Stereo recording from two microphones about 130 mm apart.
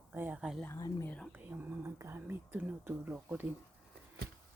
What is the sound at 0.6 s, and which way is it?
Speech, 20° left (ahead or behind).